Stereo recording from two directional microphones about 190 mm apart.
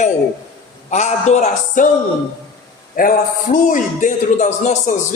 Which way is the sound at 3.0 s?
50° left (ahead or behind).